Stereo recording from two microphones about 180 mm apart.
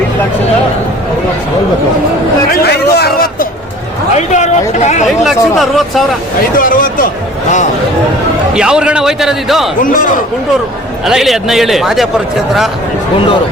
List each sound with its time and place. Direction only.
2.5 s a sound: 65° left (ahead or behind)
4.1 s speech: 40° left (ahead or behind)
5.2 s a man's voice: centre (ahead or behind)
6.6 s speech: 50° left (ahead or behind)
8.5 s a man's voice: 5° right (ahead or behind)
9.8 s speech: 50° left (ahead or behind)
11.0 s a man's voice: centre (ahead or behind)